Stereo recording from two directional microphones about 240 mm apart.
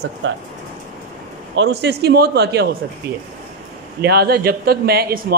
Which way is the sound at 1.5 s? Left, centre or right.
Right.